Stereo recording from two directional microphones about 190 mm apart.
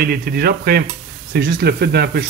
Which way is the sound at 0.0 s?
50° right (ahead or behind).